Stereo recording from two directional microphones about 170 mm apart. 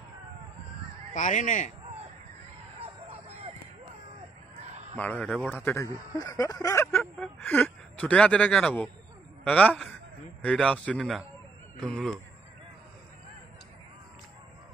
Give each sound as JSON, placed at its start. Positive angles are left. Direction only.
{"t": 1.1, "sound": "speech", "side_deg": 50}
{"t": 2.8, "sound": "a sound", "side_deg": -35}
{"t": 4.9, "sound": "speech", "side_deg": 10}
{"t": 5.7, "sound": "a man's voice", "side_deg": 20}